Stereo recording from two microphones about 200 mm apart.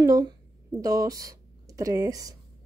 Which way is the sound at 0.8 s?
15° right (ahead or behind).